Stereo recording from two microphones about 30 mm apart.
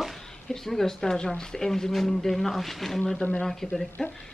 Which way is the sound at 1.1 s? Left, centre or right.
Left.